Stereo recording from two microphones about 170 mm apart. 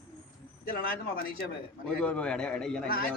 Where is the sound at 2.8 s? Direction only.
60° left (ahead or behind).